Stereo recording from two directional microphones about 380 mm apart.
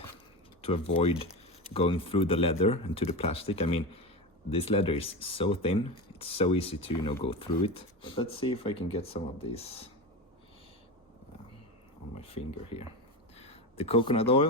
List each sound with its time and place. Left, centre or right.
0.6 s speech: centre
12.1 s speech: centre
13.3 s a sound: centre